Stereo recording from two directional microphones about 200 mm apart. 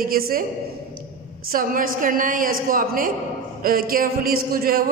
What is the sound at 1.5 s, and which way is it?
A man's voice, 45° right (ahead or behind).